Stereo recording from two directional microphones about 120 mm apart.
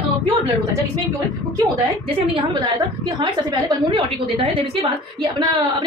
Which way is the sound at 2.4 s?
40° right (ahead or behind).